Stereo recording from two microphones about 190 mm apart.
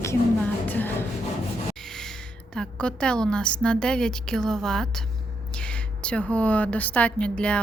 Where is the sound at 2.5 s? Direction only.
5° left (ahead or behind).